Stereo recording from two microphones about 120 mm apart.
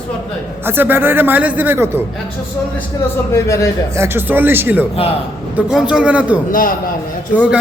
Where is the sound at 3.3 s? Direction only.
25° left (ahead or behind).